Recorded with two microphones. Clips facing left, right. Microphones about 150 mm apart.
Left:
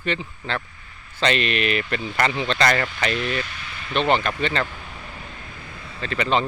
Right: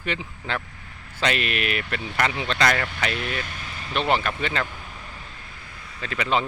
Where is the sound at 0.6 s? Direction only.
75° right (ahead or behind).